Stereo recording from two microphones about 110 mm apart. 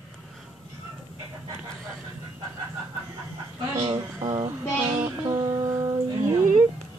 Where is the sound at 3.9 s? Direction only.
45° right (ahead or behind).